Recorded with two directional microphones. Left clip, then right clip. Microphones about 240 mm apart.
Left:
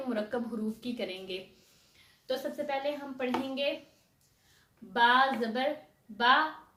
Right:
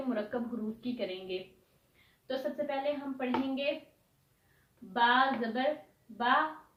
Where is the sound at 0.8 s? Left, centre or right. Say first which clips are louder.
Even; left.